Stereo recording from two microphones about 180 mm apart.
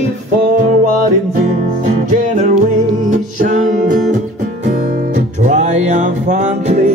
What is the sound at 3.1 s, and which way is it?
Music, 45° right (ahead or behind).